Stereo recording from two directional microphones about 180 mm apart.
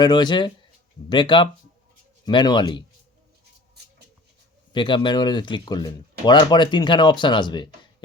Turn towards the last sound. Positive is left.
turn(degrees=25)  # may be behind; listen again after turning